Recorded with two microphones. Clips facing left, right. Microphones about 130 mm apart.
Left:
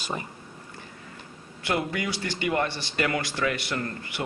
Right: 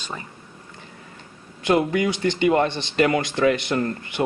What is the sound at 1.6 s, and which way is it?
Speech, 25° right (ahead or behind).